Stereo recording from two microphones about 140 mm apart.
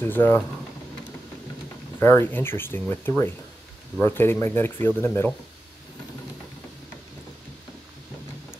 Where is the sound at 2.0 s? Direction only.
15° left (ahead or behind).